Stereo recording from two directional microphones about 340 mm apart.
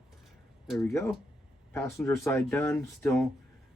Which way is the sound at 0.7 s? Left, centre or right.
Centre.